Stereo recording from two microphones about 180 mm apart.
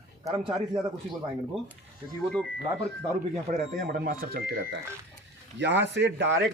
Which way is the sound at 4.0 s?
60° right (ahead or behind).